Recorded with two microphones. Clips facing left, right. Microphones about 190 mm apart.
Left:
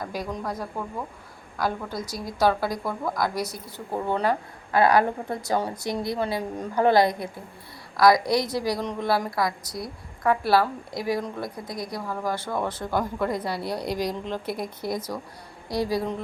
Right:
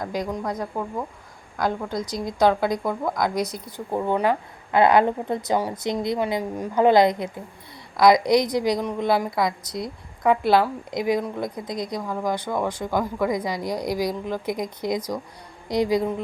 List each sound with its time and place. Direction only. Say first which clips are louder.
0.0 s a woman's voice: right 4 dB; 15° right (ahead or behind)